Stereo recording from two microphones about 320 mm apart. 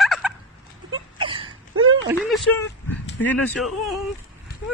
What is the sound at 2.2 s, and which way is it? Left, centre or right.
Speech, centre.